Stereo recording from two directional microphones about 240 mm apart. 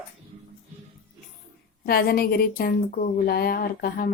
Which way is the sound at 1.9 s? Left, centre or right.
Left.